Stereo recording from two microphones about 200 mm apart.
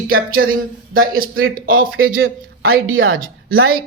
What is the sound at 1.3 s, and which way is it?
A woman's voice, 90° right.